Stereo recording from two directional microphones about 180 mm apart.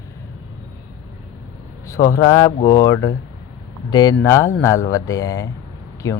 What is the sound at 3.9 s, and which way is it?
Speech, 20° left (ahead or behind).